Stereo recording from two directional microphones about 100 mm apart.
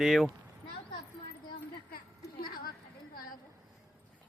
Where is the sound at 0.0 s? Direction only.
Centre (ahead or behind).